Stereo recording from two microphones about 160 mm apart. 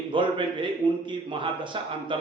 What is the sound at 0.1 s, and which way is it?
A man's voice, 30° right (ahead or behind).